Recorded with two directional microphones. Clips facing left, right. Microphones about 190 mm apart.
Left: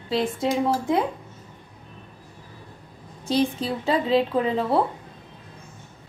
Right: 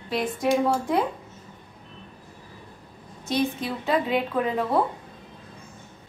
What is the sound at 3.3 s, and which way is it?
A woman's voice, 30° left (ahead or behind).